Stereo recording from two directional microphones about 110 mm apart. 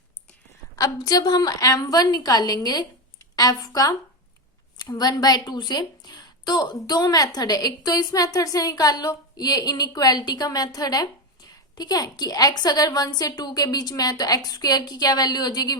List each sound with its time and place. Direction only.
0.8 s a woman's voice: 35° left (ahead or behind)